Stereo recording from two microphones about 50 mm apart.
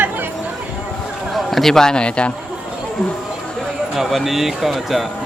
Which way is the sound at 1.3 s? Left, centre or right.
Centre.